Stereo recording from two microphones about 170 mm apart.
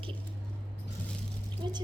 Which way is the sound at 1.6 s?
25° right (ahead or behind).